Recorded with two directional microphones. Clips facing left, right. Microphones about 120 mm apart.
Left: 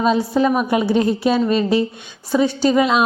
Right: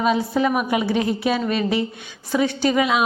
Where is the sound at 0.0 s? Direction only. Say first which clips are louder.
Left 3 dB; 25° left (ahead or behind).